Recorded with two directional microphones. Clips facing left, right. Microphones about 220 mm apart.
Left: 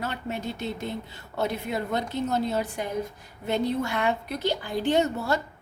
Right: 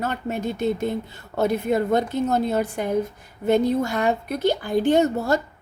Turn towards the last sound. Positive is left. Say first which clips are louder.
# right 5 dB
turn(degrees=-45)  # may be behind; listen again after turning